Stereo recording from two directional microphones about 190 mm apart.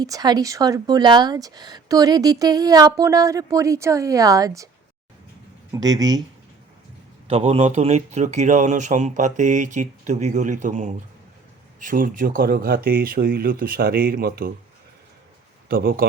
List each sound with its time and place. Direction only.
0.0 s speech: 20° right (ahead or behind)
5.7 s speech: 20° right (ahead or behind)
7.3 s speech: 30° right (ahead or behind); by 14.5 s 50° right (ahead or behind)
15.7 s speech: 50° right (ahead or behind)